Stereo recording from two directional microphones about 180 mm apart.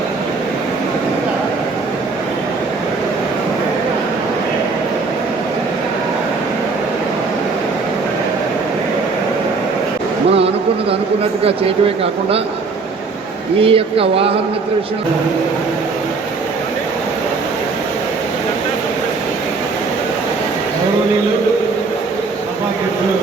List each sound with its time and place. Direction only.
13.6 s speech: 30° right (ahead or behind)